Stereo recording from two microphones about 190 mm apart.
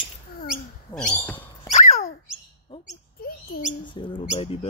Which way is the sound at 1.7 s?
40° left (ahead or behind).